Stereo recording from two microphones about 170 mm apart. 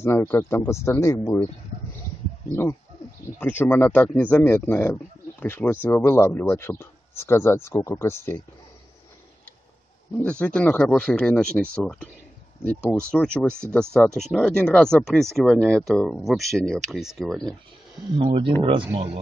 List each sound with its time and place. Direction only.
0.0 s a man's voice: 10° left (ahead or behind)
3.3 s a man's voice: 10° left (ahead or behind)
10.4 s a man's voice: 10° left (ahead or behind)
13.1 s speech: 5° left (ahead or behind)
18.1 s speech: 30° right (ahead or behind)